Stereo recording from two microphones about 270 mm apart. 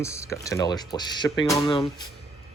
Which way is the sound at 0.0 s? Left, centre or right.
Centre.